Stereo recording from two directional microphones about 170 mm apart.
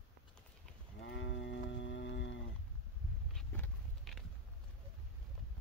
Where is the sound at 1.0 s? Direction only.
90° left.